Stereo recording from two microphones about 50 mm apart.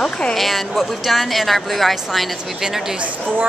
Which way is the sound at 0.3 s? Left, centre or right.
Centre.